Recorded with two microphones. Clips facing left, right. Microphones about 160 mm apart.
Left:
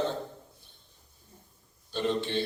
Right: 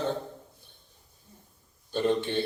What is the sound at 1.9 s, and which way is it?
Speech, 50° right (ahead or behind).